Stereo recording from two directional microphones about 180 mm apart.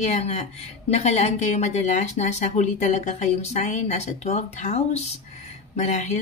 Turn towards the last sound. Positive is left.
turn(degrees=40)  # may be behind; listen again after turning